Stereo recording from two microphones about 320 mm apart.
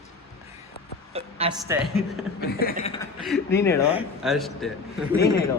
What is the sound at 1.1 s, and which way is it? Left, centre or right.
Speech, centre.